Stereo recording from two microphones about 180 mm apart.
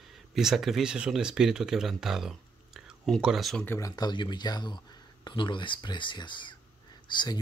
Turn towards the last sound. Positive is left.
turn(degrees=25)  # may be behind; listen again after turning